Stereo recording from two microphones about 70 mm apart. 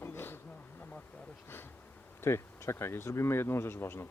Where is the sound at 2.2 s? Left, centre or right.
Left.